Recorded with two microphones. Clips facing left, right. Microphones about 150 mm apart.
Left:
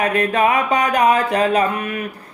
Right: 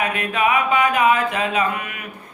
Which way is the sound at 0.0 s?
35° left (ahead or behind).